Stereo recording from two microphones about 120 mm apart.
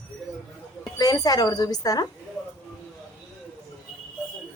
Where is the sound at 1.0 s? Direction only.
30° left (ahead or behind).